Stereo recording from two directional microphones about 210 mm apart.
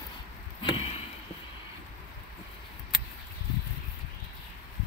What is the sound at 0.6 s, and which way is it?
Chop, 25° left (ahead or behind).